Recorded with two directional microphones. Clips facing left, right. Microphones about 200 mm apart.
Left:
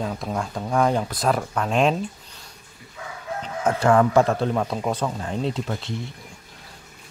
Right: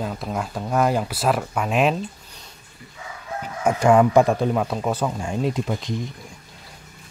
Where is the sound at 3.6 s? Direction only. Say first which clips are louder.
Right 2 dB; 15° right (ahead or behind).